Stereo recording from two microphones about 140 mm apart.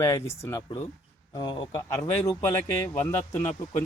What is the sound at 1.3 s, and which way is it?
Speech, 35° left (ahead or behind).